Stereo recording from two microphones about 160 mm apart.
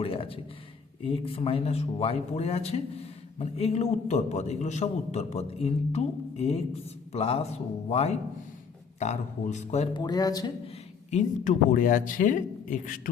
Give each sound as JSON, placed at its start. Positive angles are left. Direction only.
{"t": 0.0, "sound": "speech", "side_deg": 35}
{"t": 9.9, "sound": "speech", "side_deg": 25}
{"t": 11.1, "sound": "speech", "side_deg": 50}